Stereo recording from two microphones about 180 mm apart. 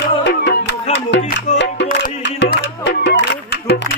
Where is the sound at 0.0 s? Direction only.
75° left (ahead or behind).